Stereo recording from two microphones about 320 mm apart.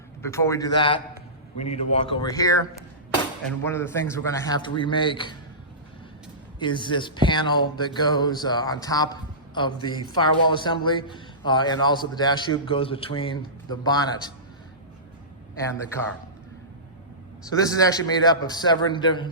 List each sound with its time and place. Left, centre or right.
0.2 s a man's voice: centre
3.7 s a man's voice: centre
6.6 s a man's voice: centre
17.4 s a man's voice: centre